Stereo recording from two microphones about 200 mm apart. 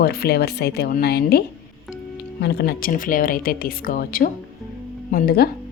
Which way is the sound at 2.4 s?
55° left (ahead or behind).